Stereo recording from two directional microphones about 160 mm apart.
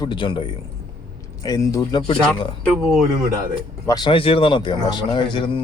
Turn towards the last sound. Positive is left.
turn(degrees=30)  # may be behind; listen again after turning